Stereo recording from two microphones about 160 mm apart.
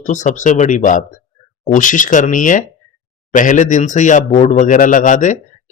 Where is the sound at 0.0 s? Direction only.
50° left (ahead or behind).